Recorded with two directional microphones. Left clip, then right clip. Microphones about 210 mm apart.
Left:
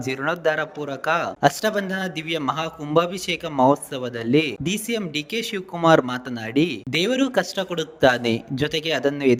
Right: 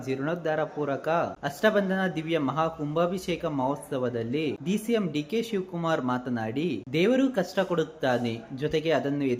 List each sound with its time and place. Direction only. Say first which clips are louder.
0.0 s speech: left 7 dB; 50° left (ahead or behind)